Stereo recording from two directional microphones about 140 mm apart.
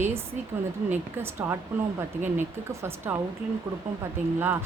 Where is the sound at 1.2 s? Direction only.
15° right (ahead or behind).